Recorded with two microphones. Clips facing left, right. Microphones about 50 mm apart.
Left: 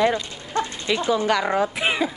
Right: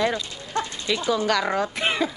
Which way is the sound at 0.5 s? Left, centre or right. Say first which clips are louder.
Left 2 dB; centre.